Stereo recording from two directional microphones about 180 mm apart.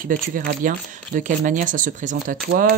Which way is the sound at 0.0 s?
50° right (ahead or behind).